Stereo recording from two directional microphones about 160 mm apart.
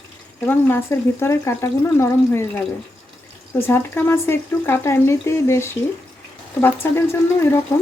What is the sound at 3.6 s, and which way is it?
Speech, 15° left (ahead or behind).